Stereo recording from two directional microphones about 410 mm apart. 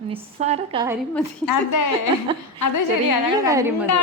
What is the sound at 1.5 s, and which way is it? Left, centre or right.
A woman's voice, left.